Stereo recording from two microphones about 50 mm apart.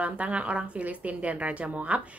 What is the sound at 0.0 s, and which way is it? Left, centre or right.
A woman's voice, right.